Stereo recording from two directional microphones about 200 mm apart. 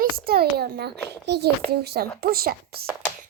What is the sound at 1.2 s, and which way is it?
Child singing, 55° right (ahead or behind).